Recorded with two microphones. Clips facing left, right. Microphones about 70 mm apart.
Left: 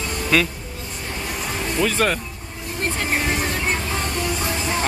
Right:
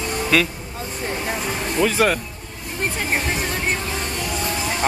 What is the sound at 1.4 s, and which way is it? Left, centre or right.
Music, centre.